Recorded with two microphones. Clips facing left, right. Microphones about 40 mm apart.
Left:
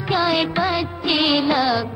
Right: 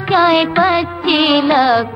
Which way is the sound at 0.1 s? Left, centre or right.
Right.